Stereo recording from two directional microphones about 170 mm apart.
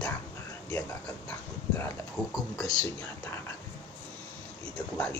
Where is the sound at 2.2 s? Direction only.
5° left (ahead or behind).